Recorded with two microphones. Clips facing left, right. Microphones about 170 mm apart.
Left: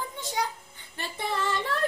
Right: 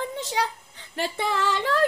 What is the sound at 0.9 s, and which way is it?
Female singing, 90° right.